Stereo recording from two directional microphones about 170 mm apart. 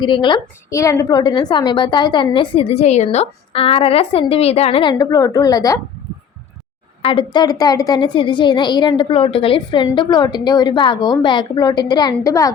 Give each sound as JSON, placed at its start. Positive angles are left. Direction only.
{"t": 0.0, "sound": "a woman's voice", "side_deg": 30}
{"t": 7.0, "sound": "a woman's voice", "side_deg": 30}